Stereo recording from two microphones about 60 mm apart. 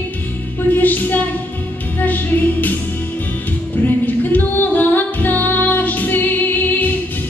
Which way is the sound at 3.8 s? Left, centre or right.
Left.